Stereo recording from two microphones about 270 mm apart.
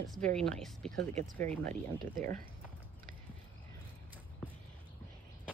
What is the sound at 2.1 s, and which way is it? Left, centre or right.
Speech, right.